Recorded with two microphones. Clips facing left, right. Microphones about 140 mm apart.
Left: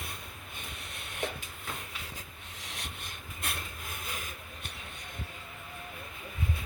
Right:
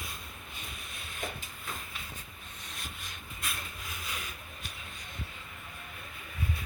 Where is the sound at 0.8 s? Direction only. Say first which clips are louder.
Left 5 dB; 70° left (ahead or behind).